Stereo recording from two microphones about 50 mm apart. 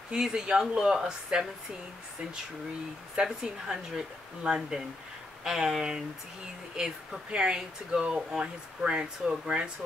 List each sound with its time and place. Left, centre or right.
0.1 s speech: centre
3.4 s speech: centre
4.4 s speech: right
5.4 s speech: centre